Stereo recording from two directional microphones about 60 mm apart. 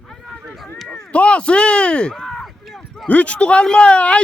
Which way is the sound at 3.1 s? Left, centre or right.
Left.